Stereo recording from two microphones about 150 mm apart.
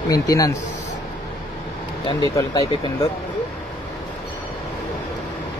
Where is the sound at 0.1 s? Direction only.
25° left (ahead or behind).